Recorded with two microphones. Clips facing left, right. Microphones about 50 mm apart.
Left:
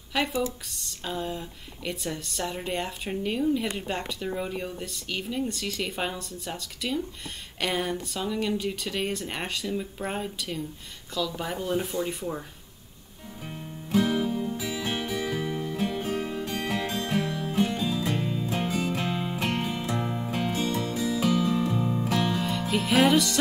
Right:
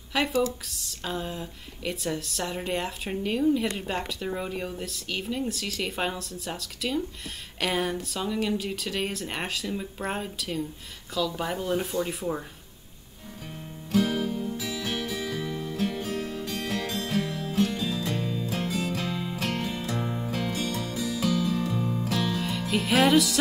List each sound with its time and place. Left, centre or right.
0.1 s speech: centre
13.5 s music: centre
22.4 s music: centre